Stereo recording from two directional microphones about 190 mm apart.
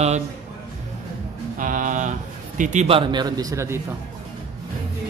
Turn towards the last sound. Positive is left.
turn(degrees=-15)  # may be behind; listen again after turning